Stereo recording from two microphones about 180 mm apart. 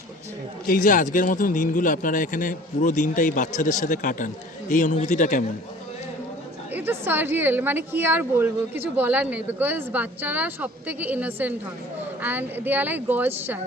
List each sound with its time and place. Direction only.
0.7 s a man's voice: 45° left (ahead or behind)
6.7 s a woman's voice: 10° right (ahead or behind)